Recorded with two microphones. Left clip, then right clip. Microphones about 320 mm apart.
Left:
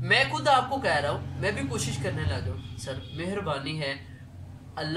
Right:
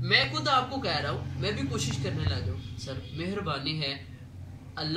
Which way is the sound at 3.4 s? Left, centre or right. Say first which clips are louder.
Even; centre.